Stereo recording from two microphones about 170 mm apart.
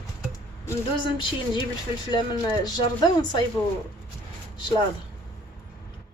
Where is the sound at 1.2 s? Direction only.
25° left (ahead or behind).